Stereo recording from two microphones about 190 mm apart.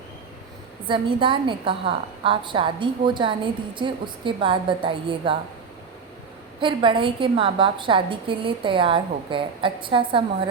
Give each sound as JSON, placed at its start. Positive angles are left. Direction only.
{"t": 0.9, "sound": "a woman's voice", "side_deg": -25}
{"t": 6.6, "sound": "a woman's voice", "side_deg": -25}